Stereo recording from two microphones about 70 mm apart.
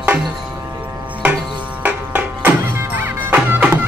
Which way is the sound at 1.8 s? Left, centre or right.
Right.